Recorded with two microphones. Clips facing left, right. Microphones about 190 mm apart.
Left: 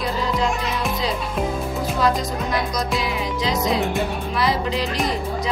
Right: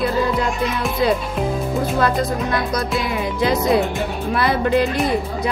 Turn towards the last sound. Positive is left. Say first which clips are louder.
# right 5 dB
turn(degrees=-55)  # may be behind; listen again after turning